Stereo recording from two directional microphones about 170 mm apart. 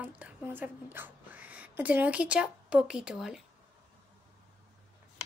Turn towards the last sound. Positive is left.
turn(degrees=-5)  # may be behind; listen again after turning